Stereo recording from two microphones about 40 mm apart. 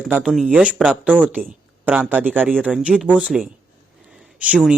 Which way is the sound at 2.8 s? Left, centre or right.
Right.